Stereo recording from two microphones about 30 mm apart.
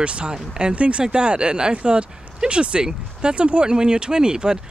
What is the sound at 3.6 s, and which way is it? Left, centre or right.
Speech, right.